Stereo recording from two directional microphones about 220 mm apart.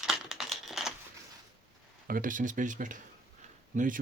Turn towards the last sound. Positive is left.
turn(degrees=-35)  # may be behind; listen again after turning